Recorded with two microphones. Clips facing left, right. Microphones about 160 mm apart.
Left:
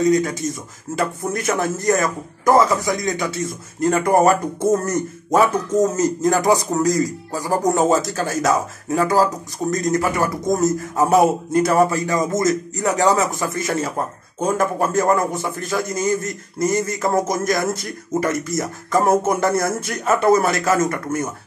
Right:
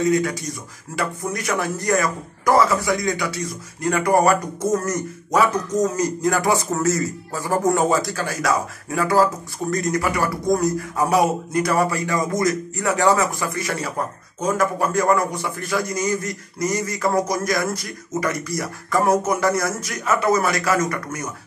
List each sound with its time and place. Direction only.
0.3 s speech: 25° left (ahead or behind)